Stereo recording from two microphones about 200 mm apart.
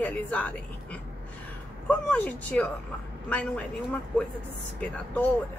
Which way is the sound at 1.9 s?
5° left (ahead or behind).